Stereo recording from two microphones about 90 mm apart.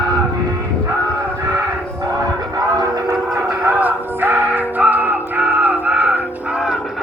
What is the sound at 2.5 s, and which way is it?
Cattle, 45° right (ahead or behind).